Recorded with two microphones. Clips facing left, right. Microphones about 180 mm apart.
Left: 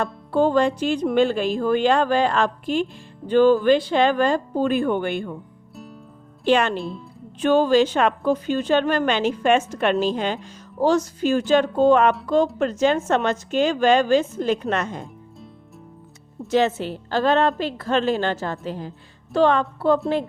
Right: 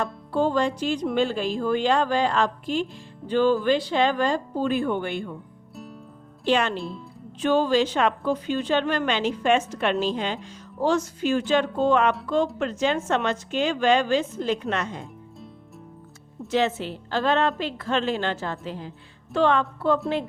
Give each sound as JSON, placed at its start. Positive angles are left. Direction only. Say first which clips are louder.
{"t": 0.0, "sound": "speech", "louder": "left 4 dB", "side_deg": 55}
{"t": 5.7, "sound": "music", "louder": "even", "side_deg": 0}
{"t": 6.4, "sound": "speech", "louder": "left 4 dB", "side_deg": 55}
{"t": 6.7, "sound": "speech", "louder": "left 3 dB", "side_deg": 0}
{"t": 7.4, "sound": "a woman's voice", "louder": "left 4 dB", "side_deg": 50}
{"t": 16.5, "sound": "a woman's voice", "louder": "left 4 dB", "side_deg": 40}